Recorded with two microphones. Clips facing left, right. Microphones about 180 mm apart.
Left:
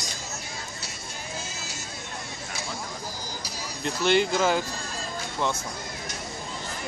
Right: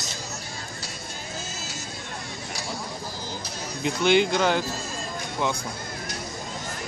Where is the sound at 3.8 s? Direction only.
Centre (ahead or behind).